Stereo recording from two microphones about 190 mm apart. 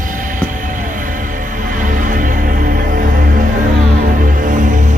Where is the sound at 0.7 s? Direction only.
45° right (ahead or behind).